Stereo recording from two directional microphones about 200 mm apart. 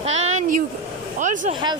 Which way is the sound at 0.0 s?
35° right (ahead or behind).